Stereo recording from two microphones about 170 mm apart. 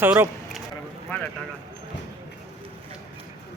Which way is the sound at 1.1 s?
10° left (ahead or behind).